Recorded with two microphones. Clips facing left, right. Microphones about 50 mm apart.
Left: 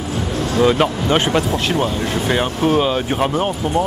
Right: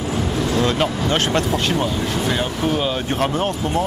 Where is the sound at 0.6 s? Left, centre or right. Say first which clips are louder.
Left 7 dB; centre.